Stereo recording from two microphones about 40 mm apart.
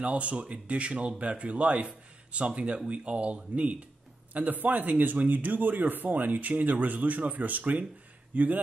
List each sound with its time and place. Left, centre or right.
0.0 s speech: right
4.3 s speech: right